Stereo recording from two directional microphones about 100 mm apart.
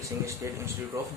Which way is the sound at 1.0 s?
30° right (ahead or behind).